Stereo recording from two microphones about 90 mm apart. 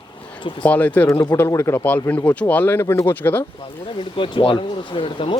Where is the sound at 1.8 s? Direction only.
15° left (ahead or behind).